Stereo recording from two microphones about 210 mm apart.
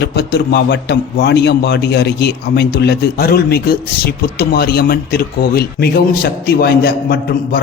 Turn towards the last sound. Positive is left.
turn(degrees=45)  # may be behind; listen again after turning